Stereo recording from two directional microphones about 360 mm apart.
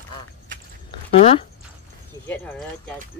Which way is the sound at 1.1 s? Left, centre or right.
Centre.